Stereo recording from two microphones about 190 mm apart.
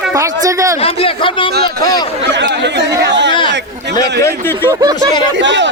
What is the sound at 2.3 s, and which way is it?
Speech, 65° right (ahead or behind).